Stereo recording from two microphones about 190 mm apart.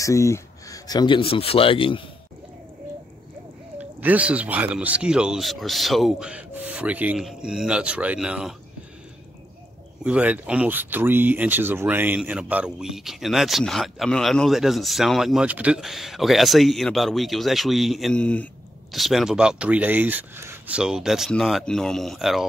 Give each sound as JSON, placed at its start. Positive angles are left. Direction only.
{"t": 0.0, "sound": "speech", "side_deg": 15}
{"t": 3.7, "sound": "speech", "side_deg": -10}
{"t": 10.0, "sound": "speech", "side_deg": -5}